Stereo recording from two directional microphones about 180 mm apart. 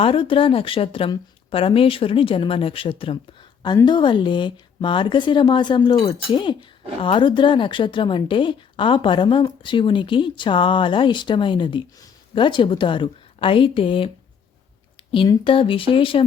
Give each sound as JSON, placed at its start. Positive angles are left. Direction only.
{"t": 0.0, "sound": "a woman's voice", "side_deg": 30}
{"t": 15.1, "sound": "a woman's voice", "side_deg": 30}